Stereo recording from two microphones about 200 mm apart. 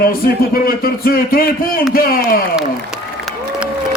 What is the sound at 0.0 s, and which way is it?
A man's voice, 45° left (ahead or behind).